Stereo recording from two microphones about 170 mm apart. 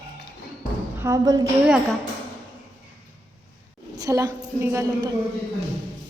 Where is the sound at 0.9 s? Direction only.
20° right (ahead or behind).